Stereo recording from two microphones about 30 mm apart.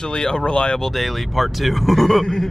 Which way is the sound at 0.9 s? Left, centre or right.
Centre.